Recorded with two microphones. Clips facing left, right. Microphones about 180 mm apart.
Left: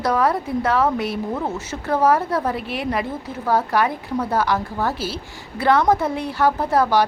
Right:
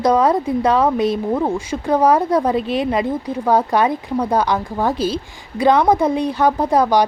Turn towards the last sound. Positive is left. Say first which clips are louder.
# right 3 dB
turn(degrees=-15)  # may be behind; listen again after turning